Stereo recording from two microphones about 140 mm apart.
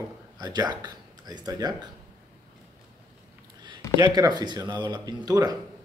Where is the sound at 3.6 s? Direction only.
30° right (ahead or behind).